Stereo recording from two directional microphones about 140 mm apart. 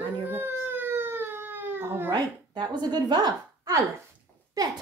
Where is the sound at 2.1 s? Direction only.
30° right (ahead or behind).